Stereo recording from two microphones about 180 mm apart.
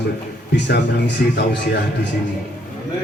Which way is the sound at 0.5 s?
70° left (ahead or behind).